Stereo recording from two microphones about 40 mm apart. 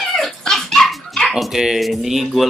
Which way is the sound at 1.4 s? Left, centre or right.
Centre.